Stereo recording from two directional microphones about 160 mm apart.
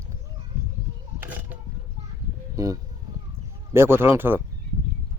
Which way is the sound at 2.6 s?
20° right (ahead or behind).